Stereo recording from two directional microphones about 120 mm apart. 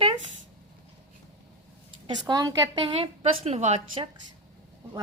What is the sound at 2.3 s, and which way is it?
Speech, 35° right (ahead or behind).